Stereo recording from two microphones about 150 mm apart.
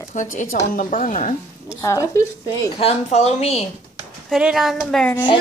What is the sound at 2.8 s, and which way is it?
Speech, 45° left (ahead or behind).